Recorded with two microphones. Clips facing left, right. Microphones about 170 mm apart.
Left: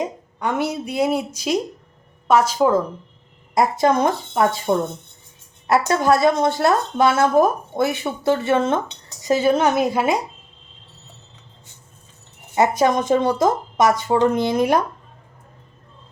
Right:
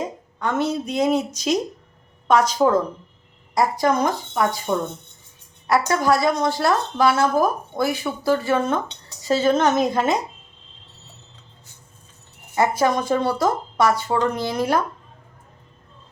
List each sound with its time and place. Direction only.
0.0 s a woman's voice: 15° left (ahead or behind)
3.5 s a woman's voice: 20° left (ahead or behind)
12.5 s speech: 20° left (ahead or behind)